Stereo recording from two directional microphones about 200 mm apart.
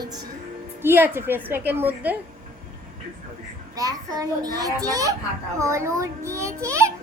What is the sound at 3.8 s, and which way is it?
A child's voice, 20° right (ahead or behind).